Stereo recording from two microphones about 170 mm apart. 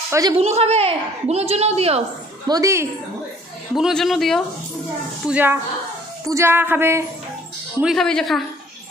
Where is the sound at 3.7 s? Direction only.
Centre (ahead or behind).